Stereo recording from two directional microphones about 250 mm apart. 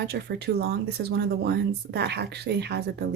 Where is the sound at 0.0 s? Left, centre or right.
Right.